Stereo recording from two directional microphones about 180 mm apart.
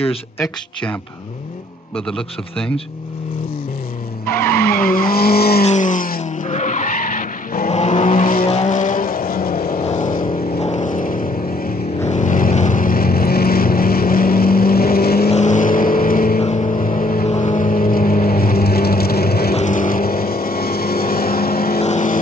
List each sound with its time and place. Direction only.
2.0 s a man's voice: 5° left (ahead or behind)
4.3 s vehicle: 10° left (ahead or behind)
5.1 s vehicle: 55° left (ahead or behind)
5.6 s skidding: 40° left (ahead or behind)
8.5 s vehicle: 40° left (ahead or behind); by 9.8 s 55° left (ahead or behind)
9.8 s vehicle: 40° left (ahead or behind)
10.2 s vehicle: 30° left (ahead or behind); by 15.2 s 60° left (ahead or behind)
15.2 s vehicle: 40° left (ahead or behind)
16.3 s vehicle: 35° left (ahead or behind)
16.8 s vehicle: 50° left (ahead or behind)
19.5 s vehicle: 45° left (ahead or behind)
21.7 s vehicle: 40° left (ahead or behind)